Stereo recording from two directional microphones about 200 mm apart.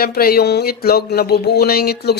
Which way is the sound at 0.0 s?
50° left (ahead or behind).